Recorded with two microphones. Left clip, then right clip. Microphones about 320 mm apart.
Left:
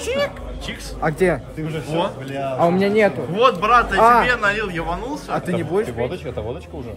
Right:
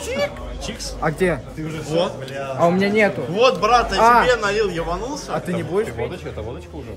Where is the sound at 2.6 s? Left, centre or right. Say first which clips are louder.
Even; centre.